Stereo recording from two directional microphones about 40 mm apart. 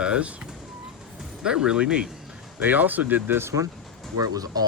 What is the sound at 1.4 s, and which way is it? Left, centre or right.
Speech, centre.